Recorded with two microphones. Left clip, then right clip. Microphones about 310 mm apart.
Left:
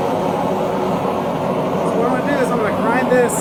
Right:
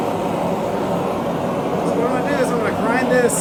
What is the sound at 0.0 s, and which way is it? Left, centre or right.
Vehicle, left.